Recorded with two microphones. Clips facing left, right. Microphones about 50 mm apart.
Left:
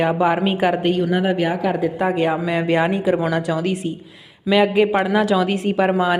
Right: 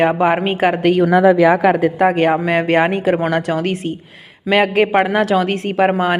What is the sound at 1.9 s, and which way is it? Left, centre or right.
A woman's voice, right.